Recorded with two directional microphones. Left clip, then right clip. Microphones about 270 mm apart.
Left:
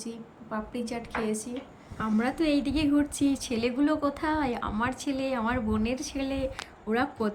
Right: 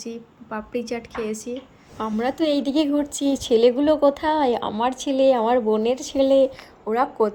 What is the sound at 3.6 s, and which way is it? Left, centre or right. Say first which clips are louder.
Speech: right 9 dB; centre.